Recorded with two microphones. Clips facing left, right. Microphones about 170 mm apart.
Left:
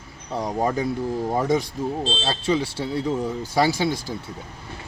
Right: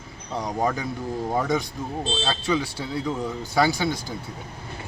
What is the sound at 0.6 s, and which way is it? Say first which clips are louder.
Speech: left 3 dB; 30° left (ahead or behind).